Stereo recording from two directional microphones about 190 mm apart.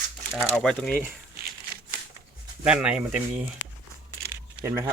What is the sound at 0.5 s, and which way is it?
Speech, 5° left (ahead or behind).